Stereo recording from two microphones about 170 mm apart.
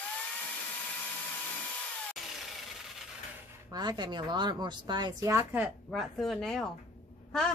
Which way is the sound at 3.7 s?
25° right (ahead or behind).